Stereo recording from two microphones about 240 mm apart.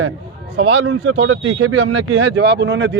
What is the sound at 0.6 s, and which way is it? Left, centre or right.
Speech, right.